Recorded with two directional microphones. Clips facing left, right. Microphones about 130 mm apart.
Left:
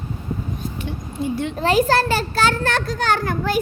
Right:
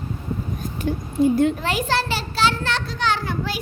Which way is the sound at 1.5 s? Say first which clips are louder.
Left 6 dB; 35° left (ahead or behind).